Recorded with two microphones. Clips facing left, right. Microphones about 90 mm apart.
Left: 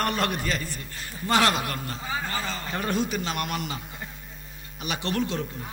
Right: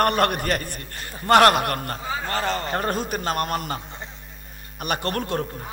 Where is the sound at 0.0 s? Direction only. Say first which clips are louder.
Right 6 dB; 55° right (ahead or behind).